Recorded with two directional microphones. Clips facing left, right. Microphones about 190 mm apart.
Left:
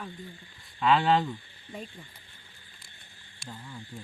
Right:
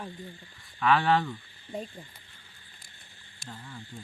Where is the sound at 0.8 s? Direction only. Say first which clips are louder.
Left 1 dB; 25° left (ahead or behind).